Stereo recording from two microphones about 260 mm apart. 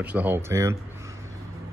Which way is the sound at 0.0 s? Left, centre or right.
Centre.